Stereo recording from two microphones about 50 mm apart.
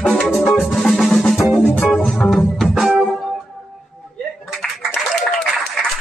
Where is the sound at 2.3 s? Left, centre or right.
Centre.